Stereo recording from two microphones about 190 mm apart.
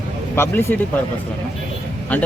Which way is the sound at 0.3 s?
10° left (ahead or behind).